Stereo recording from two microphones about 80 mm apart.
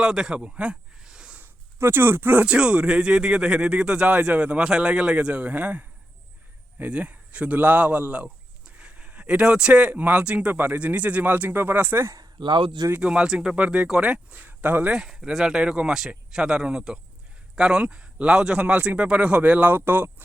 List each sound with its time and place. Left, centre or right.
0.0 s a sound: centre
1.4 s speech: right
12.4 s speech: right
13.0 s speech: centre
14.9 s speech: centre; by 20.2 s right